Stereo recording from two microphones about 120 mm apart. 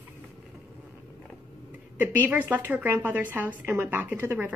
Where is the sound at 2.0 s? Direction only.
15° right (ahead or behind).